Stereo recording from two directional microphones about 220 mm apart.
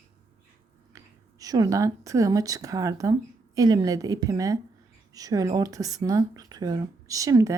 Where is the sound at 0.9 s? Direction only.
15° right (ahead or behind).